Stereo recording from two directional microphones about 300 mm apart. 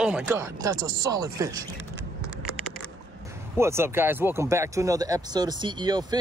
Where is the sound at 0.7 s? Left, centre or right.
Right.